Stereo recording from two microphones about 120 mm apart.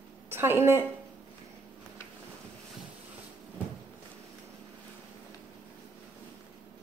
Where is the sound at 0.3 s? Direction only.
20° right (ahead or behind).